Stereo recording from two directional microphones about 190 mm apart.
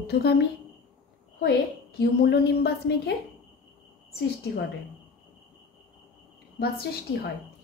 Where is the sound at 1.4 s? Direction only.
60° left (ahead or behind).